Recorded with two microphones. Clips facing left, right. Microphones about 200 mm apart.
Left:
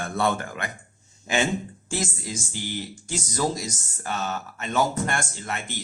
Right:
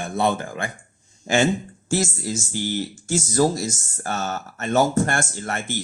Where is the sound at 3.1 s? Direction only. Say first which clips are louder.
Right 7 dB; 45° right (ahead or behind).